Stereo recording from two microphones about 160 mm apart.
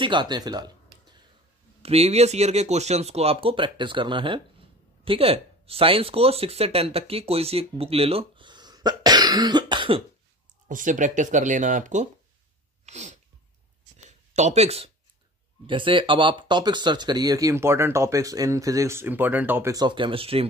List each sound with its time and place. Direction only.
0.0 s speech: 30° right (ahead or behind)
1.8 s speech: 40° right (ahead or behind)
10.7 s speech: 55° right (ahead or behind)
12.8 s sneeze: 45° right (ahead or behind)
13.9 s a sound: 45° right (ahead or behind)
15.6 s speech: 30° right (ahead or behind); by 19.7 s 10° right (ahead or behind)
19.7 s speech: 25° right (ahead or behind)